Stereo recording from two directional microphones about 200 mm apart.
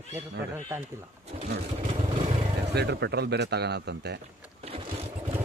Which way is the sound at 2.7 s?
60° right (ahead or behind).